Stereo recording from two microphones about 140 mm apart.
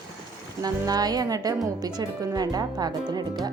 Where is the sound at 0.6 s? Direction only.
25° right (ahead or behind).